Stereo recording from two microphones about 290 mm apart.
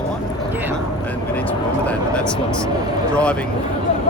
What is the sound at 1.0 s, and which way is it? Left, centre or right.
Vehicle, centre.